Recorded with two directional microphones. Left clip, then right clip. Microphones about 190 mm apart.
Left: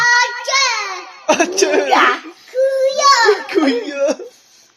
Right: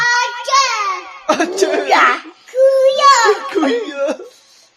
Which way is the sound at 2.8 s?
10° right (ahead or behind).